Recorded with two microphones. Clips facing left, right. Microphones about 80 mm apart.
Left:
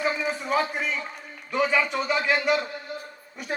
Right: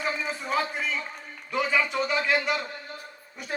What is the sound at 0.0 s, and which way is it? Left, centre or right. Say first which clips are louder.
Speech: left 4 dB; left.